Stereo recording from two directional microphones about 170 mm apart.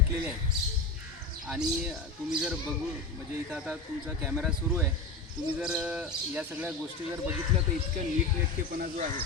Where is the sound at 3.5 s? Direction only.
5° right (ahead or behind).